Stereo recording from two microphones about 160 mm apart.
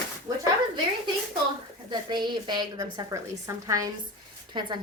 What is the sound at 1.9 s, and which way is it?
A woman's voice, 25° right (ahead or behind).